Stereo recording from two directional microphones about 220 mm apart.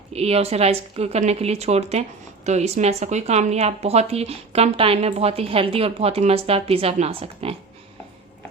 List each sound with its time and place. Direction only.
0.1 s speech: 30° right (ahead or behind)